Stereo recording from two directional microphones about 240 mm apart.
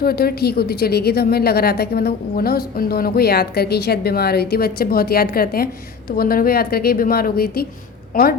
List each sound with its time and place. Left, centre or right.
0.0 s a woman's voice: left